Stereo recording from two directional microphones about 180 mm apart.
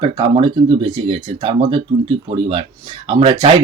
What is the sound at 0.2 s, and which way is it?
Speech, 30° right (ahead or behind).